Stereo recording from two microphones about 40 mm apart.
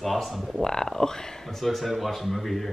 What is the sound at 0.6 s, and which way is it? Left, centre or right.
Speech, centre.